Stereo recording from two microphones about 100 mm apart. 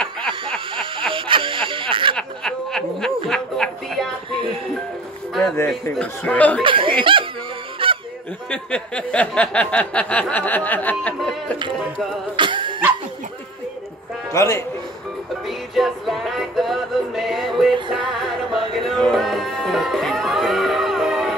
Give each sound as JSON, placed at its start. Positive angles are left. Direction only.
{"t": 0.3, "sound": "a sound", "side_deg": -60}
{"t": 2.1, "sound": "snicker", "side_deg": 5}
{"t": 3.3, "sound": "a sound", "side_deg": 5}
{"t": 5.9, "sound": "a sound", "side_deg": 15}
{"t": 6.6, "sound": "speech", "side_deg": -60}
{"t": 7.8, "sound": "goose", "side_deg": -60}
{"t": 8.5, "sound": "a sound", "side_deg": 10}
{"t": 11.7, "sound": "music", "side_deg": 0}
{"t": 12.4, "sound": "dog", "side_deg": -55}
{"t": 14.3, "sound": "speech", "side_deg": 30}
{"t": 15.4, "sound": "music", "side_deg": 0}
{"t": 17.7, "sound": "music", "side_deg": -55}
{"t": 18.2, "sound": "music", "side_deg": 0}